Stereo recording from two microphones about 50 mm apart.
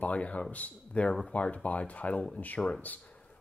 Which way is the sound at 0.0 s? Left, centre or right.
Left.